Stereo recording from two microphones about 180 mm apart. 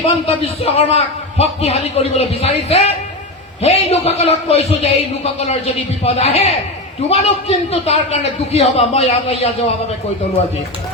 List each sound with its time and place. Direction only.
0.0 s a man's voice: 35° left (ahead or behind)